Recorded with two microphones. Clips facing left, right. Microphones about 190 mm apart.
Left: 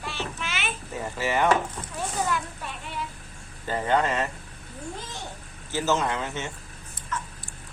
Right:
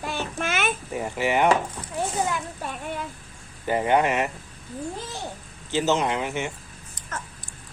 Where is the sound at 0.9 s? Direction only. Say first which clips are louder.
Right 2 dB; 15° right (ahead or behind).